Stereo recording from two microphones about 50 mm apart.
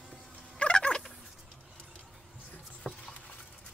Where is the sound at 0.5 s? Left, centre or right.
Centre.